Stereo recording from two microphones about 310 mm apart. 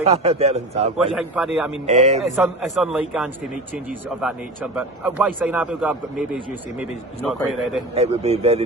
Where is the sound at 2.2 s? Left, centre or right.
Centre.